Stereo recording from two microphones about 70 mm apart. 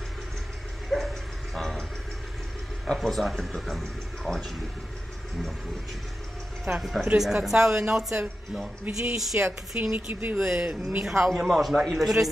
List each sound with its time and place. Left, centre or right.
0.8 s a sound: centre
2.9 s speech: centre
6.8 s speech: centre
9.9 s speech: right
11.1 s speech: centre